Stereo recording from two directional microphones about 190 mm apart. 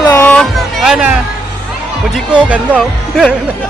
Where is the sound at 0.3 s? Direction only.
Centre (ahead or behind).